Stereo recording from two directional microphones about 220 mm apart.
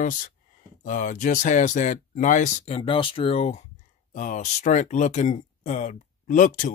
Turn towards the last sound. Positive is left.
turn(degrees=35)  # may be behind; listen again after turning